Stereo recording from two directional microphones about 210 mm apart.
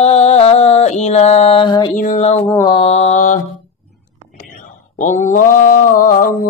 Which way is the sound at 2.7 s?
30° left (ahead or behind).